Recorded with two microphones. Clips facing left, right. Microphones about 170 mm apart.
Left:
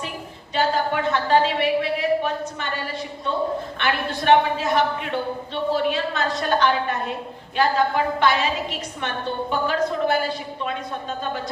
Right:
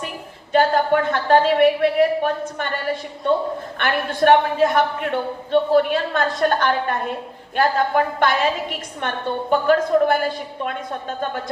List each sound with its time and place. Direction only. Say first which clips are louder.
0.5 s a man's voice: right 5 dB; 50° right (ahead or behind)